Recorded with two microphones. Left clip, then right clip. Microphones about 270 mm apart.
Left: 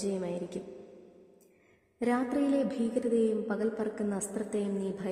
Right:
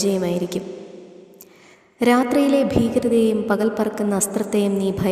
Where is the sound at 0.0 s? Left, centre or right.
Right.